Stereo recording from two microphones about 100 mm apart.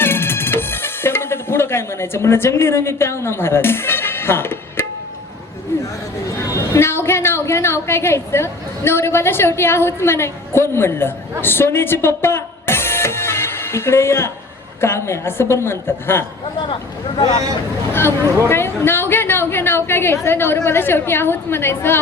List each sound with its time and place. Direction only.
0.0 s music: 25° left (ahead or behind)
6.4 s a woman's voice: 25° left (ahead or behind)
17.9 s a man's voice: 25° left (ahead or behind)